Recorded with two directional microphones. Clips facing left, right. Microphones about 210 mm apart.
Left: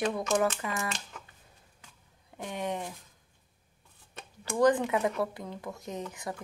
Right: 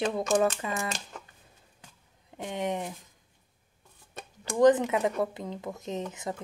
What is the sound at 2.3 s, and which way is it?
Speech, 20° right (ahead or behind).